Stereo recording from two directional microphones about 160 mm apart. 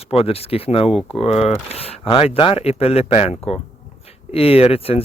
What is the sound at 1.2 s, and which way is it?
Speech, 40° left (ahead or behind).